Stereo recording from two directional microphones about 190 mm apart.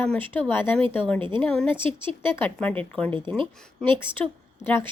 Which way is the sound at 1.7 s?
25° right (ahead or behind).